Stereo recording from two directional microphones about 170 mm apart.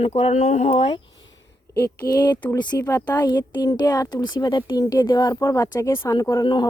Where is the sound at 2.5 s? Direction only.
25° left (ahead or behind).